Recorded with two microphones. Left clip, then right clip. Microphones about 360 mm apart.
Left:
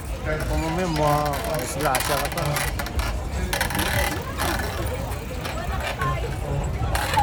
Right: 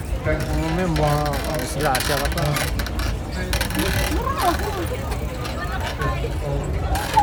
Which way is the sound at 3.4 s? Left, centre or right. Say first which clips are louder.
Even; centre.